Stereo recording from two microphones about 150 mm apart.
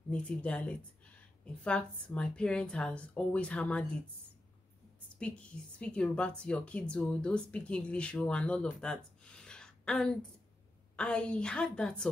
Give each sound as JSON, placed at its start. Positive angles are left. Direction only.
{"t": 0.1, "sound": "a woman's voice", "side_deg": 10}
{"t": 5.2, "sound": "a woman's voice", "side_deg": 10}